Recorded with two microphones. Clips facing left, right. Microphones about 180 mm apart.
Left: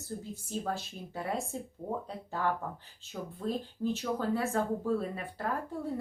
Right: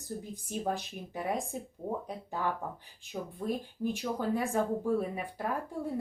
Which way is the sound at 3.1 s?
15° right (ahead or behind).